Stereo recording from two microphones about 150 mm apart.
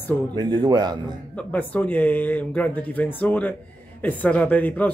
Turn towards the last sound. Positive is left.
turn(degrees=10)  # may be behind; listen again after turning